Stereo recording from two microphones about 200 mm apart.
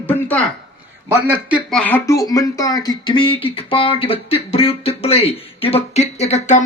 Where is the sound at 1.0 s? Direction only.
10° right (ahead or behind).